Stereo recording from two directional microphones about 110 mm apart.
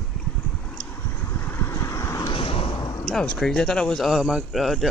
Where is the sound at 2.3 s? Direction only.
55° left (ahead or behind).